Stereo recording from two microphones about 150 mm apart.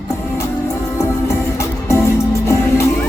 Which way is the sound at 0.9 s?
20° left (ahead or behind).